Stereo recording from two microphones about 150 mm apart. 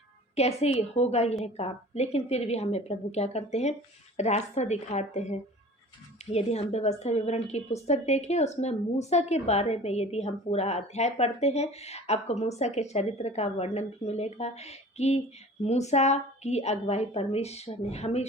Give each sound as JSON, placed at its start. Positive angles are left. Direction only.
{"t": 0.3, "sound": "a woman's voice", "side_deg": 45}